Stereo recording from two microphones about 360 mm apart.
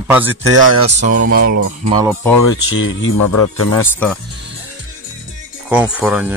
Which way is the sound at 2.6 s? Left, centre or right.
Left.